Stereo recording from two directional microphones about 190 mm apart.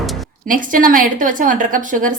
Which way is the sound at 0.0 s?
Centre (ahead or behind).